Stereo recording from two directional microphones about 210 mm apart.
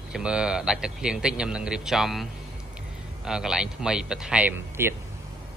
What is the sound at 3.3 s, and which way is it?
A man's voice, 5° right (ahead or behind).